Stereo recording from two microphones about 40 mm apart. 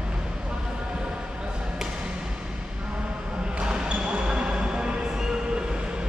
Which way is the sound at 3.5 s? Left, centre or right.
Right.